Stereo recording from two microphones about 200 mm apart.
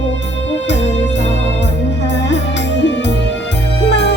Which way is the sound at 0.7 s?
60° left (ahead or behind).